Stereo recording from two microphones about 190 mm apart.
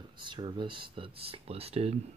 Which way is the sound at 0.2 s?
25° right (ahead or behind).